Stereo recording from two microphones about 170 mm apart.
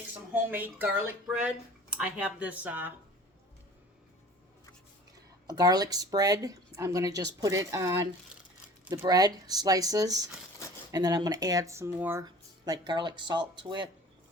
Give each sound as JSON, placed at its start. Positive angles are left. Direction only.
{"t": 0.5, "sound": "speech", "side_deg": -10}
{"t": 5.5, "sound": "speech", "side_deg": -20}
{"t": 12.2, "sound": "speech", "side_deg": -25}